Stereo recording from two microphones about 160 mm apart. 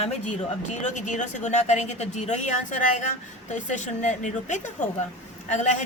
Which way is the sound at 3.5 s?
50° left (ahead or behind).